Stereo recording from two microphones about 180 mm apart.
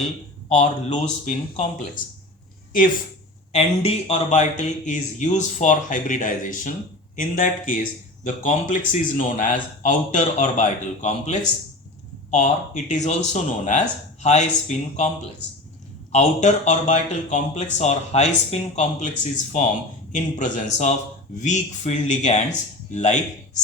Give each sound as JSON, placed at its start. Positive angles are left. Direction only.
{"t": 0.4, "sound": "speech", "side_deg": 40}
{"t": 3.5, "sound": "a man's voice", "side_deg": 35}
{"t": 16.1, "sound": "speech", "side_deg": 40}